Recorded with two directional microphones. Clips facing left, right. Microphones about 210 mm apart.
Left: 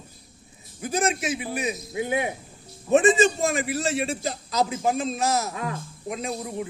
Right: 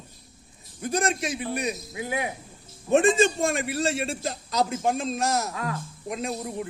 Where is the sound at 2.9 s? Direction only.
Centre (ahead or behind).